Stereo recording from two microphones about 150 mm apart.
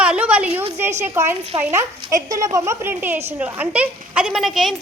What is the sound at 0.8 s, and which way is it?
A woman's voice, 15° right (ahead or behind).